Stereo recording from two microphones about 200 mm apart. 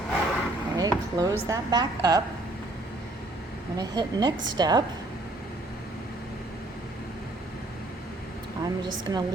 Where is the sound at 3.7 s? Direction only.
20° right (ahead or behind).